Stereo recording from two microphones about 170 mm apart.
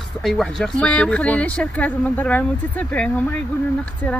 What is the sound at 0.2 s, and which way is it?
Speech, centre (ahead or behind).